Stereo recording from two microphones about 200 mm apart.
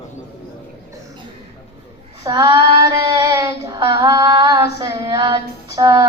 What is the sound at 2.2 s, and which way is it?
Child singing, 15° right (ahead or behind).